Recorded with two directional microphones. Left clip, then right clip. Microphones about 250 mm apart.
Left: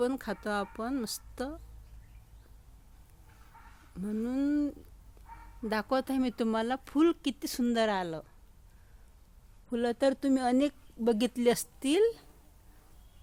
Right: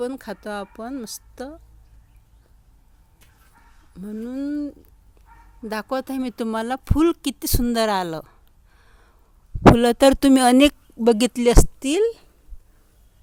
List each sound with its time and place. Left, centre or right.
0.0 s speech: centre
3.9 s speech: centre; by 8.4 s right
9.7 s speech: right